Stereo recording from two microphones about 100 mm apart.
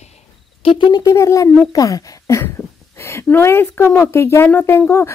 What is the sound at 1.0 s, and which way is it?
Speech, 30° left (ahead or behind).